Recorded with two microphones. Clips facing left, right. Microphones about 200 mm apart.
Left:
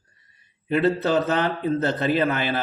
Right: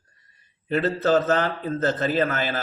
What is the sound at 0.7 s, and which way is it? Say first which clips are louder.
A man's voice: even; 45° right (ahead or behind).